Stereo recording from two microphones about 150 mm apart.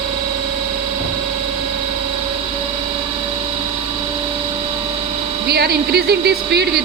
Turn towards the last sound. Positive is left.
turn(degrees=-90)